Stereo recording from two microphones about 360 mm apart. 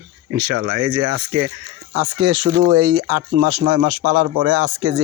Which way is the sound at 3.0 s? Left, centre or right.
Right.